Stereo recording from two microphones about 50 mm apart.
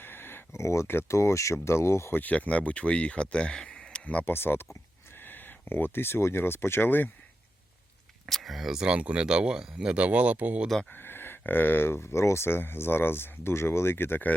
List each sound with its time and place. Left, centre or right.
0.0 s a sound: left
0.5 s speech: left
1.0 s speech: left
1.6 s speech: left
2.1 s speech: left
4.3 s speech: left
8.3 s speech: centre
9.0 s speech: right
10.8 s speech: left